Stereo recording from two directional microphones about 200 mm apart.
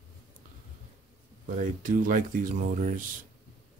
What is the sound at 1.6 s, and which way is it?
Speech, 40° right (ahead or behind).